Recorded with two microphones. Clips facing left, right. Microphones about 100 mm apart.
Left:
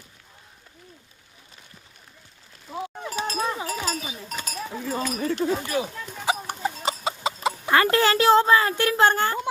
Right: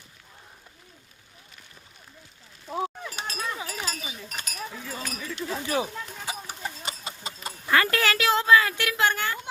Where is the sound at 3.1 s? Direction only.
35° left (ahead or behind).